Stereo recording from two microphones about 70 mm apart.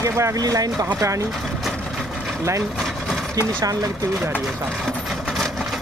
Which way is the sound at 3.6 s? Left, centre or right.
Right.